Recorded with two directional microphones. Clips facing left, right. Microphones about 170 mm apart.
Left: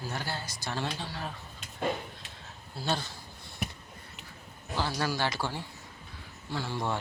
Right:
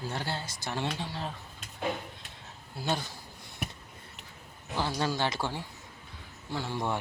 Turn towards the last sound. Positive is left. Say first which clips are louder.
# even
turn(degrees=-15)  # may be behind; listen again after turning